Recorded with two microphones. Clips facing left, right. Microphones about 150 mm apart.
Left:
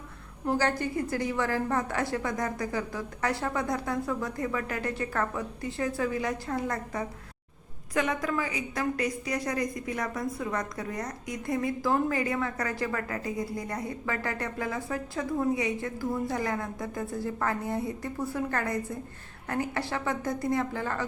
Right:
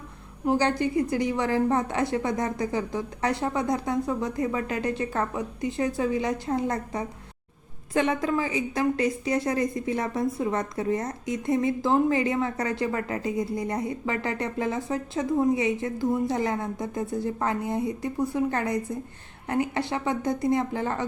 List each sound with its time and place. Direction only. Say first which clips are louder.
0.4 s a woman's voice: right 4 dB; 20° right (ahead or behind)